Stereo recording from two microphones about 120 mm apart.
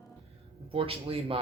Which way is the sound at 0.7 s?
50° right (ahead or behind).